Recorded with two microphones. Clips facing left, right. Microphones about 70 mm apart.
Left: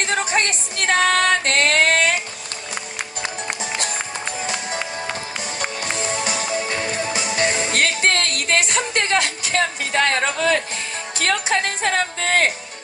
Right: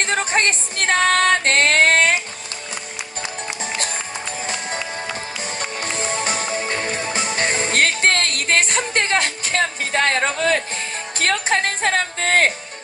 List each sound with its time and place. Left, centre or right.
0.0 s music: right
6.1 s music: right
11.2 s a woman's voice: right